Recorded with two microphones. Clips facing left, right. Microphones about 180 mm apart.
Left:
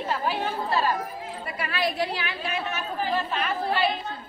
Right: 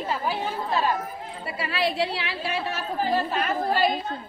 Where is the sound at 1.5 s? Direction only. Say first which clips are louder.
Right 2 dB; 30° right (ahead or behind).